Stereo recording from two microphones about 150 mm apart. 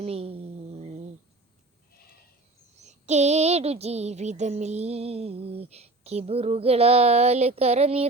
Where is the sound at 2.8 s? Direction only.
50° right (ahead or behind).